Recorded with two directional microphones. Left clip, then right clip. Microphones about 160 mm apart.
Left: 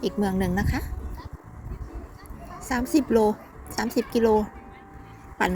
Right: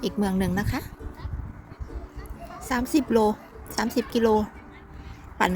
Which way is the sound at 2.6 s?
20° right (ahead or behind).